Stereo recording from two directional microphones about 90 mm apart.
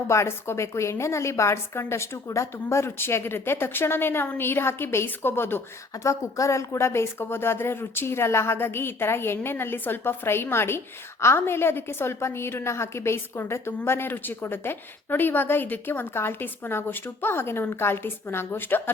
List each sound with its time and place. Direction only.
0.1 s a woman's voice: 30° left (ahead or behind)